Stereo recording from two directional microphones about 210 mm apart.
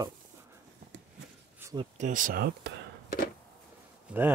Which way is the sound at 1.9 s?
35° right (ahead or behind).